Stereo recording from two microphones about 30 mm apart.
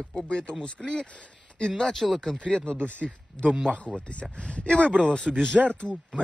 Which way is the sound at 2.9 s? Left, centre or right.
Left.